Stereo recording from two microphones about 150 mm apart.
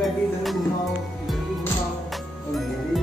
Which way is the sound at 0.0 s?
Centre (ahead or behind).